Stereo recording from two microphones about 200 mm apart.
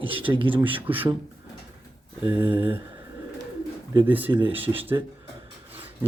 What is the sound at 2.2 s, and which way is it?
Speech, 10° right (ahead or behind).